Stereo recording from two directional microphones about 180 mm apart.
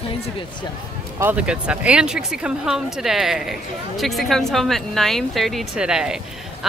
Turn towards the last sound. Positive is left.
turn(degrees=-5)  # may be behind; listen again after turning